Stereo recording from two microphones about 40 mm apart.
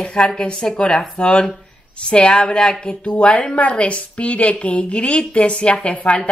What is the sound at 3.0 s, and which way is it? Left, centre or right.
A woman's voice, left.